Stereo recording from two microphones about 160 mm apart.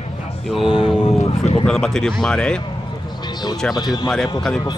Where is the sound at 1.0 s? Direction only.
35° left (ahead or behind).